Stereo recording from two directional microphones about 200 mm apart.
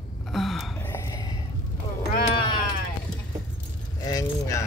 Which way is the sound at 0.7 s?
10° left (ahead or behind).